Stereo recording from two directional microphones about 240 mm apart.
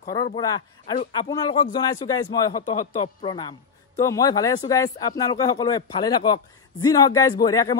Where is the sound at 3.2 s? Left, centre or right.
Centre.